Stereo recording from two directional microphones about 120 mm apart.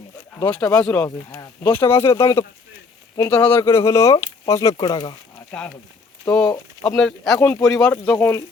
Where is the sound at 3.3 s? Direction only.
15° left (ahead or behind).